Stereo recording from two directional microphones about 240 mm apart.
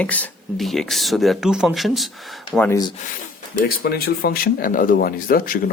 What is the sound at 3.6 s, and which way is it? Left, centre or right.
Speech, left.